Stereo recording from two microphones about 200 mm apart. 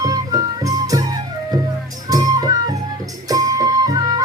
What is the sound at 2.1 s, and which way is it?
Music, 20° right (ahead or behind).